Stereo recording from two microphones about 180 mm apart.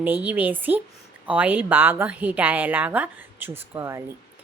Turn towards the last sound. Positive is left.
turn(degrees=-15)  # may be behind; listen again after turning